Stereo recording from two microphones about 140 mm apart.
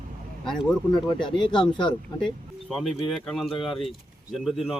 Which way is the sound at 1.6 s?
35° left (ahead or behind).